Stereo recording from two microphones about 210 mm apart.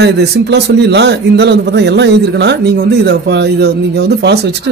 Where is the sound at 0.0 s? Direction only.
55° right (ahead or behind).